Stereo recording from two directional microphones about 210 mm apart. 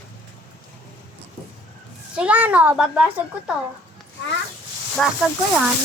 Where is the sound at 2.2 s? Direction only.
5° right (ahead or behind).